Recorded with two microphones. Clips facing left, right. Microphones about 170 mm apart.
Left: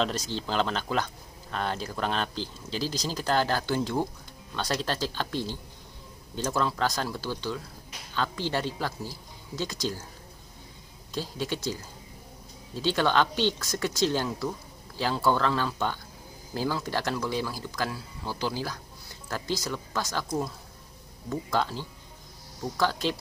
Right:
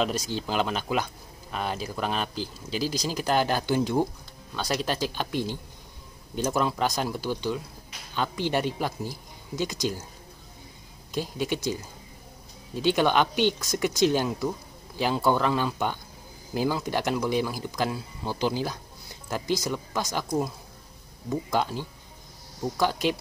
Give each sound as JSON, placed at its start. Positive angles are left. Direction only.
{"t": 0.0, "sound": "speech", "side_deg": -10}
{"t": 11.1, "sound": "speech", "side_deg": -15}